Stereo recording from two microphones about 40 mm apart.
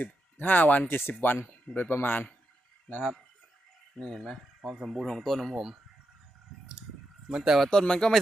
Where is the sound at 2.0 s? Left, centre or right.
Left.